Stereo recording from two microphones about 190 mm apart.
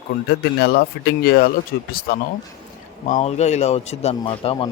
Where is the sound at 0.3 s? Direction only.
55° left (ahead or behind).